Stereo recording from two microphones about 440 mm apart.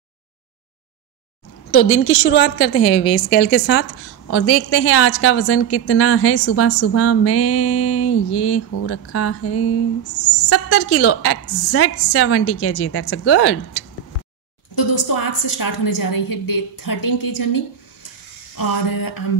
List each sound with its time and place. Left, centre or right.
1.7 s a woman's voice: left
14.8 s a woman's voice: left
18.6 s a woman's voice: left